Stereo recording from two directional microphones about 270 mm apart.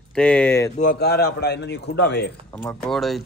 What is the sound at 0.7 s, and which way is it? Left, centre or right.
A man's voice, left.